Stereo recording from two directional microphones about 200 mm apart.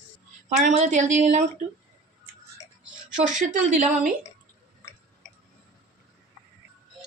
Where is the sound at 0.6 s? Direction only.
35° right (ahead or behind).